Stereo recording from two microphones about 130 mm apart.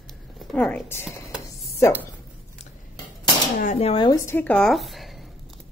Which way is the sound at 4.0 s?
25° left (ahead or behind).